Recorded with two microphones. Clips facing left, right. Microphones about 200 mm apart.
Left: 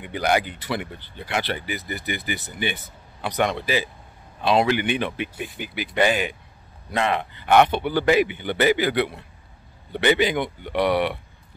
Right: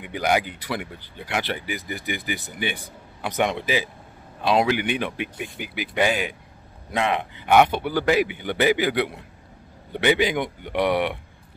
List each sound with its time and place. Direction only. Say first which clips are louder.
0.0 s a man's voice: even; 10° right (ahead or behind)